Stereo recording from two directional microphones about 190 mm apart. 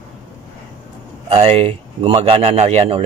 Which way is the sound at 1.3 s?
35° right (ahead or behind).